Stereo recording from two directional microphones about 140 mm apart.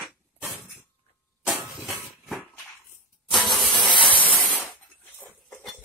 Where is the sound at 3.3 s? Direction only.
Centre (ahead or behind).